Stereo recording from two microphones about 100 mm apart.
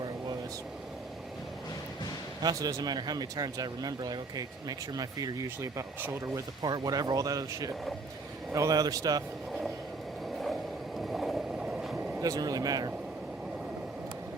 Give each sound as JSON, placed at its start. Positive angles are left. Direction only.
{"t": 2.4, "sound": "speech", "side_deg": -40}
{"t": 6.6, "sound": "speech", "side_deg": -45}
{"t": 10.4, "sound": "vehicle", "side_deg": 0}
{"t": 12.2, "sound": "speech", "side_deg": -40}